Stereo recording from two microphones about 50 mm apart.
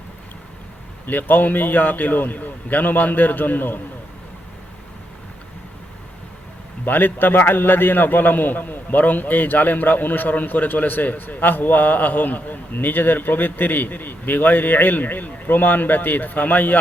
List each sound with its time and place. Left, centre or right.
1.0 s a man's voice: left
6.8 s a man's voice: left